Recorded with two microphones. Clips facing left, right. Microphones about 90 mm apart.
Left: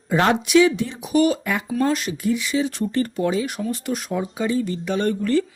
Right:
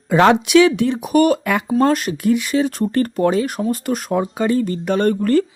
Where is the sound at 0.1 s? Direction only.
85° right.